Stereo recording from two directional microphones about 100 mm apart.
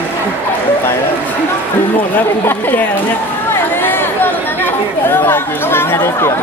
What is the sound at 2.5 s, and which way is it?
Speech, 15° left (ahead or behind).